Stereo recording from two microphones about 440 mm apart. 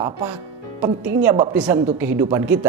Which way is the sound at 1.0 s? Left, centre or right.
Centre.